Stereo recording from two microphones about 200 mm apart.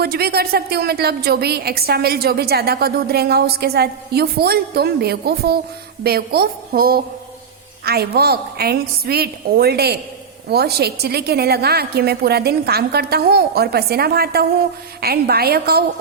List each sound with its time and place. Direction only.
0.0 s a woman's voice: 50° right (ahead or behind)